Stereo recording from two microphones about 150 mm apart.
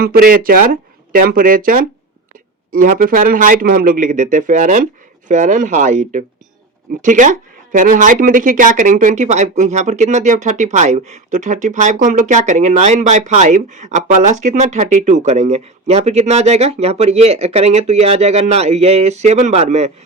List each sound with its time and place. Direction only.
0.0 s a man's voice: 80° right; by 19.9 s 45° right (ahead or behind)